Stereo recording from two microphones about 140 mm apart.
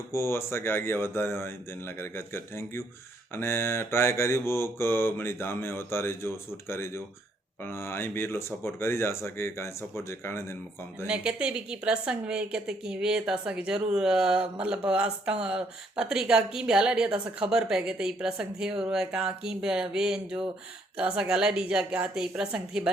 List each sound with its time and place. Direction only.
0.1 s mantra: 20° left (ahead or behind)
11.0 s speech: 5° right (ahead or behind)